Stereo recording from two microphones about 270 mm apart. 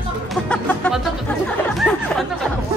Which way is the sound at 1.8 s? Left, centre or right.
Centre.